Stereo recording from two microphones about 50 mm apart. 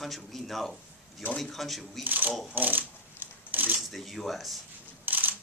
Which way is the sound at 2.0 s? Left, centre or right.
Right.